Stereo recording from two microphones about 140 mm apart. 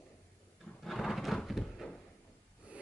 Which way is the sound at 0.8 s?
Centre (ahead or behind).